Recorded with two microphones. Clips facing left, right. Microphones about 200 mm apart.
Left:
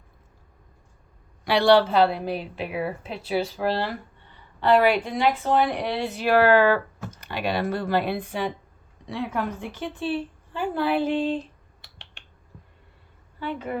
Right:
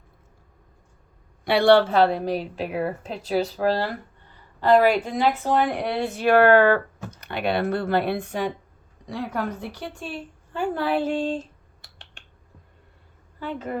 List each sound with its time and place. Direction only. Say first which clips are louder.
1.5 s a woman's voice: right 1 dB; 55° right (ahead or behind)
13.4 s speech: even; 40° right (ahead or behind)